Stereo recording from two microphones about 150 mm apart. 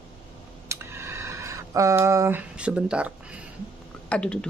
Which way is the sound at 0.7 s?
15° right (ahead or behind).